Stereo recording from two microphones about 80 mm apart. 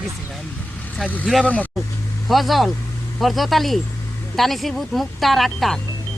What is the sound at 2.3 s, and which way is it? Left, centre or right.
Speech, centre.